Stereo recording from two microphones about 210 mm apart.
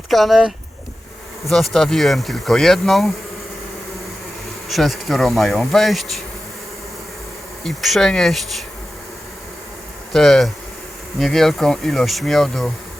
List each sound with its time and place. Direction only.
0.1 s speech: centre (ahead or behind)
4.7 s speech: centre (ahead or behind)
7.6 s speech: centre (ahead or behind)
10.1 s speech: centre (ahead or behind)